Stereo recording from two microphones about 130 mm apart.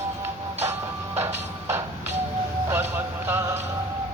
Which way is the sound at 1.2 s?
20° right (ahead or behind).